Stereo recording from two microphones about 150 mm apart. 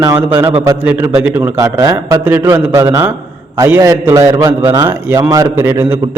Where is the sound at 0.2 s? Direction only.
15° right (ahead or behind).